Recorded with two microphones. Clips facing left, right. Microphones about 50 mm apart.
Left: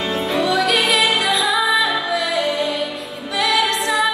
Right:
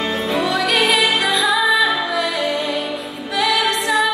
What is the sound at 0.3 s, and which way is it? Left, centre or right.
Music, centre.